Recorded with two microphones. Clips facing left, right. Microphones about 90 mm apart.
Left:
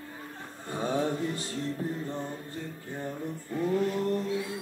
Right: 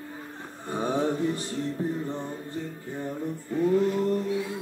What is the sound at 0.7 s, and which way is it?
Mantra, 20° right (ahead or behind).